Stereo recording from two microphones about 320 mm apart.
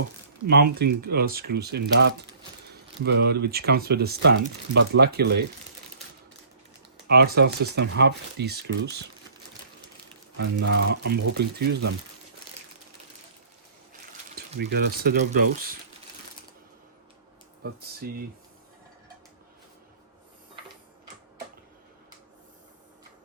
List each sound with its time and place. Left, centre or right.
0.4 s speech: right
7.1 s speech: right
10.3 s speech: right
14.3 s speech: right
17.6 s speech: right